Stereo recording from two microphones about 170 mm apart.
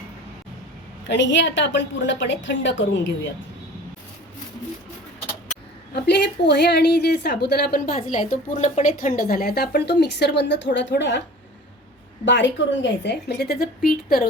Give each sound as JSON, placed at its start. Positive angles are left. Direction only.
{"t": 1.0, "sound": "a woman's voice", "side_deg": 90}
{"t": 5.9, "sound": "a woman's voice", "side_deg": 75}
{"t": 7.4, "sound": "speech", "side_deg": 70}
{"t": 8.1, "sound": "a woman's voice", "side_deg": 50}
{"t": 12.2, "sound": "a woman's voice", "side_deg": 90}